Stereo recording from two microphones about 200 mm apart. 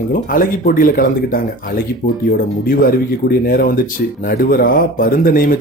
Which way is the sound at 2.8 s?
45° left (ahead or behind).